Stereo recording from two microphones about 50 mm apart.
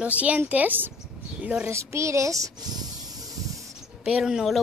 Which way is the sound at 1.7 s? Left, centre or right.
Right.